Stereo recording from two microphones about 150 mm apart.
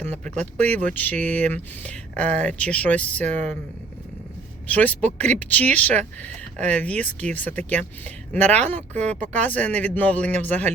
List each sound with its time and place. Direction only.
0.0 s speech: 10° left (ahead or behind)
3.2 s speech: 55° right (ahead or behind)
4.7 s speech: 10° left (ahead or behind)